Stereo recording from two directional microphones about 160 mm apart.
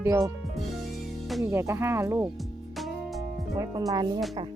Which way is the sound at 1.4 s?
15° right (ahead or behind).